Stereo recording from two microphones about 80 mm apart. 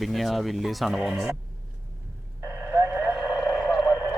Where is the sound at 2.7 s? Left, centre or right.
Right.